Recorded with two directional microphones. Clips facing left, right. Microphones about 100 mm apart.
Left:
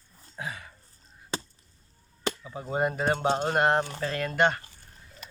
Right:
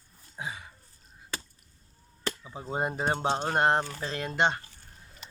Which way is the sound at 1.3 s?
25° left (ahead or behind).